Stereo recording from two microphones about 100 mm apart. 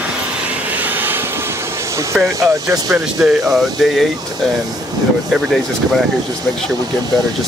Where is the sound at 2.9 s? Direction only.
5° right (ahead or behind).